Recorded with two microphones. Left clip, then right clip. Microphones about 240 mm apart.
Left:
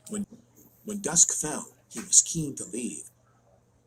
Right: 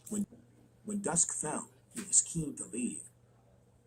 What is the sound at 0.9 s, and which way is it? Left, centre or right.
Speech, left.